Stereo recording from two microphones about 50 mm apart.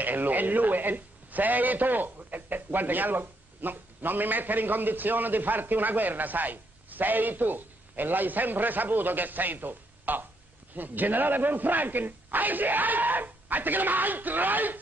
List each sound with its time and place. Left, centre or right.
0.0 s a man's voice: right